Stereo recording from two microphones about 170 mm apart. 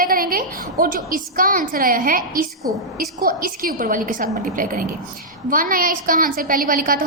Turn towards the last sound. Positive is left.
turn(degrees=-55)  # may be behind; listen again after turning